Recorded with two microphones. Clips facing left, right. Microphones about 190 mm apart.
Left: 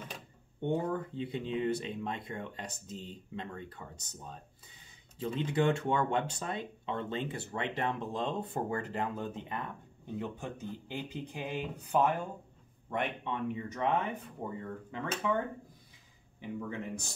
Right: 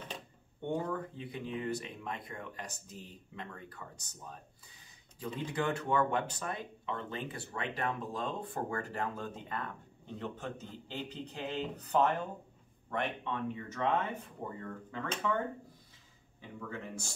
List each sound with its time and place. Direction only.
0.7 s a man's voice: 25° left (ahead or behind)
16.3 s a man's voice: 15° left (ahead or behind)